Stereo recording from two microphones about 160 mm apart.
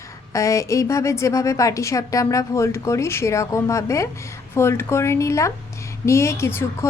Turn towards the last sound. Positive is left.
turn(degrees=15)  # may be behind; listen again after turning